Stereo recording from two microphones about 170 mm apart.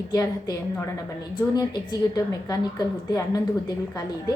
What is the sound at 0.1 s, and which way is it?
A woman's voice, 20° left (ahead or behind).